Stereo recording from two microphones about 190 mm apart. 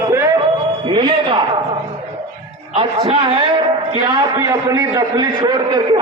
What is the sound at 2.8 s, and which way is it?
A man's voice, 25° right (ahead or behind).